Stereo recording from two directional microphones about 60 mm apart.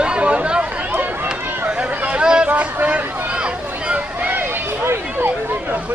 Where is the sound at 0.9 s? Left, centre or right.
Right.